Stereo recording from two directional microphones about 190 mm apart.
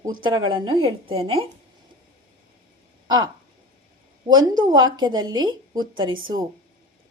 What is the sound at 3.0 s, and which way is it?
Speech, 20° right (ahead or behind).